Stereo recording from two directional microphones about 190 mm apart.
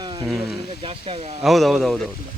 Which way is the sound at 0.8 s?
30° right (ahead or behind).